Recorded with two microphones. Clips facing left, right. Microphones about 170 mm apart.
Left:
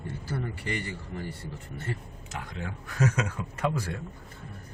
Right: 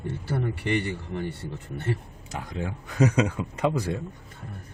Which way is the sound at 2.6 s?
20° right (ahead or behind).